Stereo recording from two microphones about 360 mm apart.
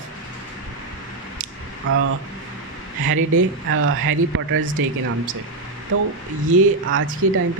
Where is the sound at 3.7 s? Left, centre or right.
Right.